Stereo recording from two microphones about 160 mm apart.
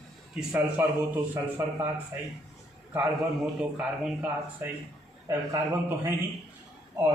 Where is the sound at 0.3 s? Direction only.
10° right (ahead or behind).